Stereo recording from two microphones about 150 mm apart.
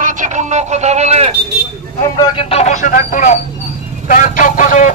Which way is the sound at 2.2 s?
40° left (ahead or behind).